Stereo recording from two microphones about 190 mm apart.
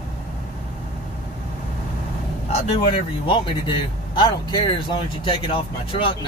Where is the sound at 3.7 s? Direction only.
25° left (ahead or behind).